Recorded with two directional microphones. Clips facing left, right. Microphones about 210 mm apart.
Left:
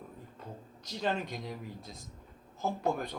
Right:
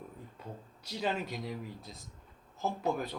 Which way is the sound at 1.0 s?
5° right (ahead or behind).